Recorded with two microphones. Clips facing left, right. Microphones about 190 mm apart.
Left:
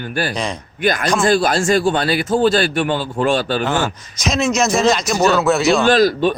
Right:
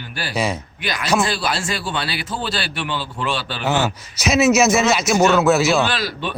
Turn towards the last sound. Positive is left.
turn(degrees=45)  # may be behind; listen again after turning